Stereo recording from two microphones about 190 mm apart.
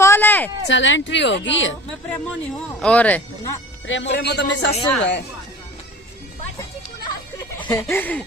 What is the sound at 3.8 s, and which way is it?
Speech, 80° left.